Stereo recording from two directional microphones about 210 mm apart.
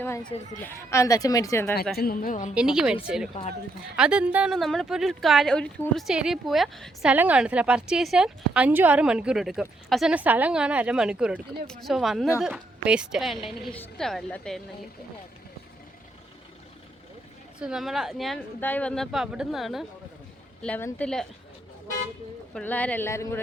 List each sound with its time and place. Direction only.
0.6 s a woman's voice: 15° left (ahead or behind)
2.0 s a woman's voice: 45° left (ahead or behind)
2.6 s speech: 5° right (ahead or behind)
17.6 s speech: 5° right (ahead or behind)
22.5 s a woman's voice: 5° left (ahead or behind)